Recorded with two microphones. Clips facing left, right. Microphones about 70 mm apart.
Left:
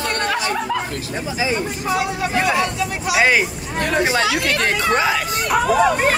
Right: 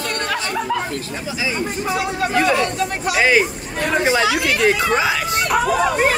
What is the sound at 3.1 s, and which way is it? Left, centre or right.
Speech, centre.